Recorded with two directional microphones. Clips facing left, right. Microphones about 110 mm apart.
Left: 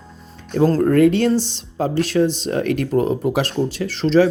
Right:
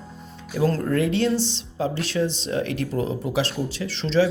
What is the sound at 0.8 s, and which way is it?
Speech, 50° left (ahead or behind).